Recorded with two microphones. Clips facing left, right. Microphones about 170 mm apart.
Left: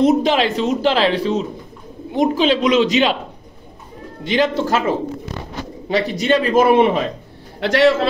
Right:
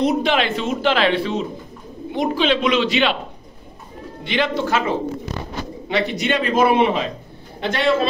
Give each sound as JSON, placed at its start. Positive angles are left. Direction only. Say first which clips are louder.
{"t": 0.0, "sound": "speech", "louder": "left 4 dB", "side_deg": 40}
{"t": 4.2, "sound": "speech", "louder": "left 4 dB", "side_deg": 40}
{"t": 5.9, "sound": "a man's voice", "louder": "left 4 dB", "side_deg": 40}
{"t": 7.6, "sound": "a man's voice", "louder": "left 4 dB", "side_deg": 80}